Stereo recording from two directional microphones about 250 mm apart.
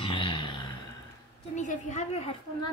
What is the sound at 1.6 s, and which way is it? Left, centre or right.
A woman's voice, left.